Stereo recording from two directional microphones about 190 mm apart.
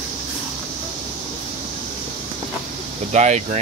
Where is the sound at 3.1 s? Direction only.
35° right (ahead or behind).